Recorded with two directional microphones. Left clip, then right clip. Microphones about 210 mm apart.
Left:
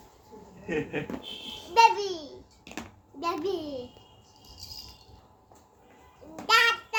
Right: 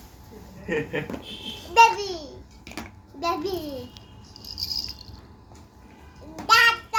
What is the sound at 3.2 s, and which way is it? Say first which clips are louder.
Babbling: right 3 dB; 15° left (ahead or behind).